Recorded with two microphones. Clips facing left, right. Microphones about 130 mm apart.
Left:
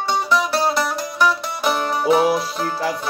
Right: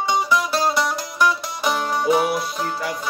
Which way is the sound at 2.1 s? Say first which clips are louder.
Left 4 dB; 30° left (ahead or behind).